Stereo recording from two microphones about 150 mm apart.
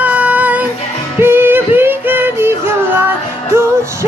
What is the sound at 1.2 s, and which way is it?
Music, 15° right (ahead or behind).